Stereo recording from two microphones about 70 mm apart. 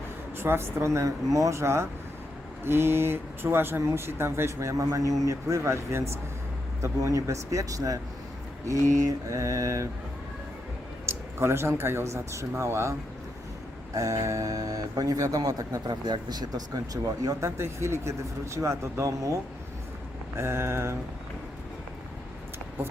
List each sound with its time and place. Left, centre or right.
0.3 s speech: right
9.0 s speech: right
11.0 s speech: right
17.4 s speech: right
20.3 s speech: right